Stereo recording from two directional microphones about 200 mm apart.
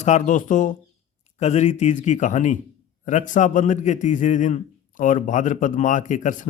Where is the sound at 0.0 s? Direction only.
40° left (ahead or behind).